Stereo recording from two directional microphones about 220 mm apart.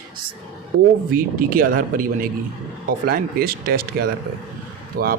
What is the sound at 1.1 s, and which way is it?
Speech, 40° right (ahead or behind).